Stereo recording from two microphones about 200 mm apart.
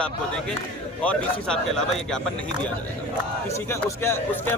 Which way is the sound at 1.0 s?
5° left (ahead or behind).